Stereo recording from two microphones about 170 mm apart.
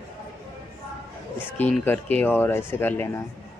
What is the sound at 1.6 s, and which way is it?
Speech, 10° left (ahead or behind).